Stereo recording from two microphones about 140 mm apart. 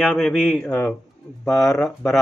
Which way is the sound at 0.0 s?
10° left (ahead or behind).